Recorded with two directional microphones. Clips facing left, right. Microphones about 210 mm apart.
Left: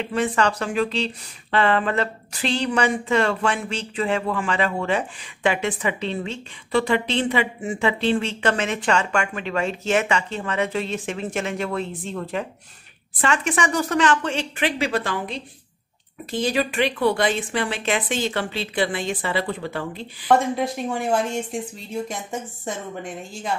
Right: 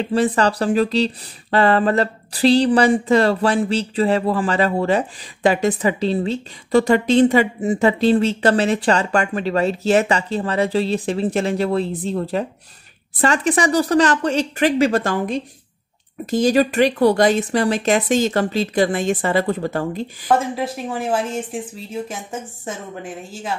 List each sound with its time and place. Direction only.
0.0 s speech: 35° right (ahead or behind)
20.2 s speech: centre (ahead or behind)